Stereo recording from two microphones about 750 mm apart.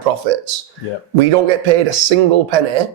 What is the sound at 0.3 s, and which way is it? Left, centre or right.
Speech, right.